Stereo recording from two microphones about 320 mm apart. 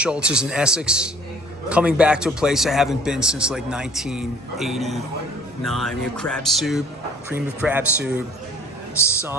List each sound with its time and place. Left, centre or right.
0.0 s a man's voice: centre